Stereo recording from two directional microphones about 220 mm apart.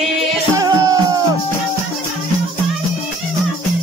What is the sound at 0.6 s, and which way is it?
Music, 15° right (ahead or behind).